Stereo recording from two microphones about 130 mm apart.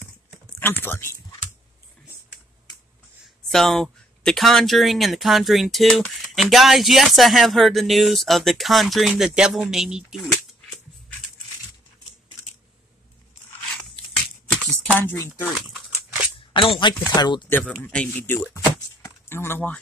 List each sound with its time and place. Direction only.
0.8 s speech: 20° left (ahead or behind)
3.4 s speech: 5° left (ahead or behind)
14.5 s a sound: 5° left (ahead or behind)
16.5 s speech: 40° left (ahead or behind)
17.5 s speech: 15° left (ahead or behind)
18.6 s a sound: 20° left (ahead or behind)